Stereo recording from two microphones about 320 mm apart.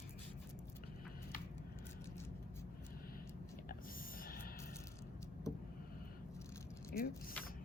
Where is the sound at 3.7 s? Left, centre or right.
Left.